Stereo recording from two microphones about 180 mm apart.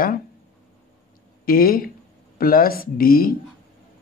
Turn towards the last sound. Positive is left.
turn(degrees=55)  # may be behind; listen again after turning